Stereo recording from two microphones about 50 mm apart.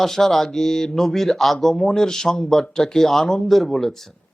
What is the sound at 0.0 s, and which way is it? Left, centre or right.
Speech, centre.